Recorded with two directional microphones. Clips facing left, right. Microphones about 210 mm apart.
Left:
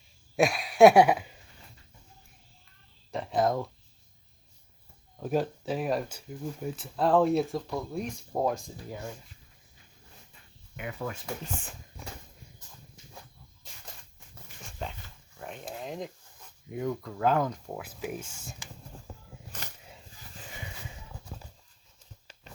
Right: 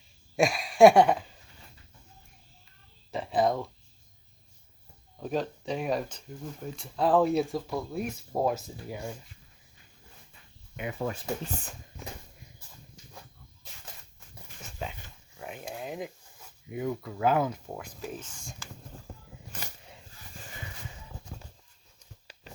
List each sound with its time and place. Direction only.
0.3 s a sound: centre (ahead or behind)
3.1 s a sound: centre (ahead or behind)
5.1 s speech: 5° left (ahead or behind); by 9.1 s 10° right (ahead or behind)
10.8 s speech: 25° right (ahead or behind)
14.8 s dog: 5° right (ahead or behind)
15.4 s speech: 5° right (ahead or behind); by 18.7 s 10° left (ahead or behind)